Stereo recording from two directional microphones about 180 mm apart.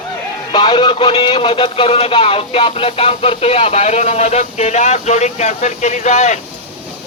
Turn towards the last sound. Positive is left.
turn(degrees=40)  # may be behind; listen again after turning